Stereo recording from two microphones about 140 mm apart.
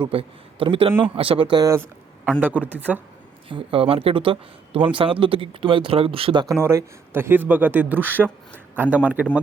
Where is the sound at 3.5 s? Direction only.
40° right (ahead or behind).